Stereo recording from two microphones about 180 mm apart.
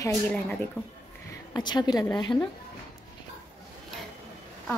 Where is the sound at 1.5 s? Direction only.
25° left (ahead or behind).